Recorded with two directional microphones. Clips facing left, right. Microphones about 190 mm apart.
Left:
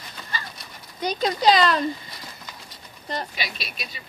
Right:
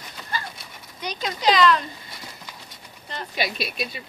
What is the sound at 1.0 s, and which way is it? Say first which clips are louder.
Speech: left 3 dB; 35° left (ahead or behind).